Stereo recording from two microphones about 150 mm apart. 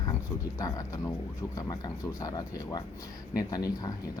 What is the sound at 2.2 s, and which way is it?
Speech, 25° left (ahead or behind).